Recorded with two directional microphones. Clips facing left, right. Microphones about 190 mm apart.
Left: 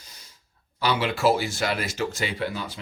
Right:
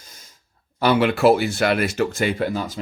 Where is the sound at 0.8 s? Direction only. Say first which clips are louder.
Right 7 dB; 55° right (ahead or behind).